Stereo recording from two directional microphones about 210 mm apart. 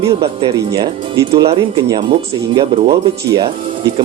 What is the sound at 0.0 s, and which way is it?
Speech, 15° right (ahead or behind).